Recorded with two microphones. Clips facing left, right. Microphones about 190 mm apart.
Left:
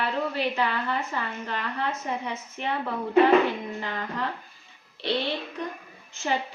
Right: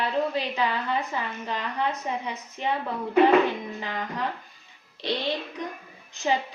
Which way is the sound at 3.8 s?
15° right (ahead or behind).